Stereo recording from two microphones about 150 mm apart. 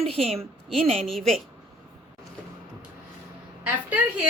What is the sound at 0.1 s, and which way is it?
Speech, 40° right (ahead or behind).